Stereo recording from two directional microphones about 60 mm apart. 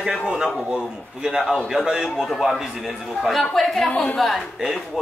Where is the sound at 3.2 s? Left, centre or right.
Centre.